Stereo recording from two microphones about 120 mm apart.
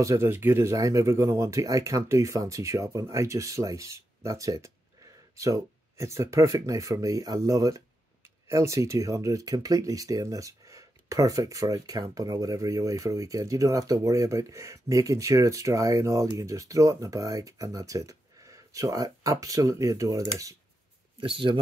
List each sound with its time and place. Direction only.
0.0 s speech: 25° right (ahead or behind)
21.2 s speech: 45° right (ahead or behind)